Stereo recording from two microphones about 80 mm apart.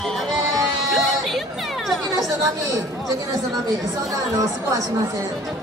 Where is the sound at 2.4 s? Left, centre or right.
Right.